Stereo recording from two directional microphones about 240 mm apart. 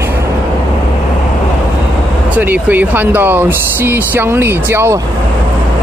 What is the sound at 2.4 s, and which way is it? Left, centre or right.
Speech, centre.